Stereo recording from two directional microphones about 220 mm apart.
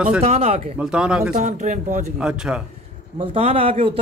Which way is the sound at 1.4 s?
30° right (ahead or behind).